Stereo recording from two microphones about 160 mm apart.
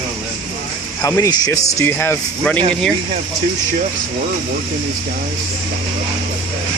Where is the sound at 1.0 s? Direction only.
20° left (ahead or behind).